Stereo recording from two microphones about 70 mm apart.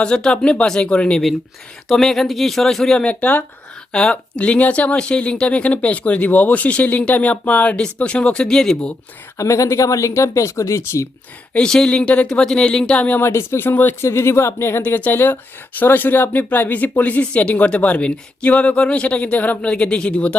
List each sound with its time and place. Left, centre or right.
0.0 s speech: centre
1.9 s speech: centre
3.1 s speech: left
3.9 s speech: centre
9.4 s speech: left
11.5 s speech: centre
13.1 s speech: left
14.0 s speech: left
14.8 s speech: left